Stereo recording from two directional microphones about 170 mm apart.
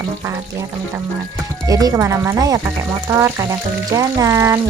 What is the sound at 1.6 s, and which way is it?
Speech, 20° right (ahead or behind).